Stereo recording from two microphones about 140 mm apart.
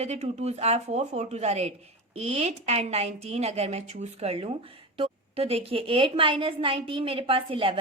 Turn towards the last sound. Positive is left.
turn(degrees=-40)  # may be behind; listen again after turning